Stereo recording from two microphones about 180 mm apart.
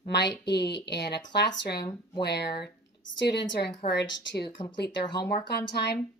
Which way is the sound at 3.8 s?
40° left (ahead or behind).